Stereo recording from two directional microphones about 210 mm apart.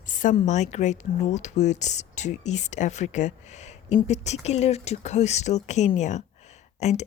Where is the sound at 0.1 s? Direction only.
40° left (ahead or behind).